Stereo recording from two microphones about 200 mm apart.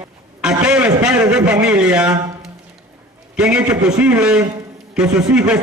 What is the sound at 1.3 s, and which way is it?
Speech, 5° right (ahead or behind).